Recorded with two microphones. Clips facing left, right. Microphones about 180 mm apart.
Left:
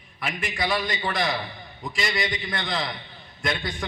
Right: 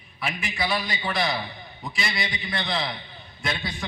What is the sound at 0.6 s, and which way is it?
A man's voice, 45° left (ahead or behind).